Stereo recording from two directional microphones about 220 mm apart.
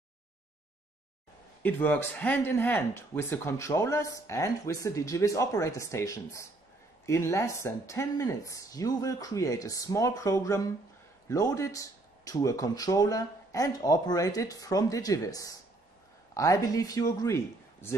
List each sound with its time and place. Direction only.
1.6 s speech: 10° left (ahead or behind)